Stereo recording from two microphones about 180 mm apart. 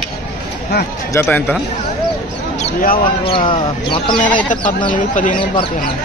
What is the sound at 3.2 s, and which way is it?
Speech, 30° left (ahead or behind).